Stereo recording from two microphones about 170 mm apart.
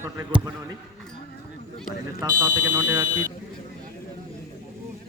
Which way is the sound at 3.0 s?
50° right (ahead or behind).